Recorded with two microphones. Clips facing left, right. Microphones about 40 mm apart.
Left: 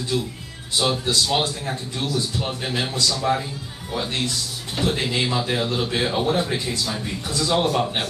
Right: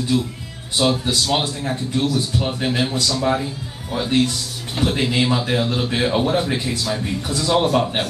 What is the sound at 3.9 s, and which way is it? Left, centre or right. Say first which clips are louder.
Speech: right 4 dB; right.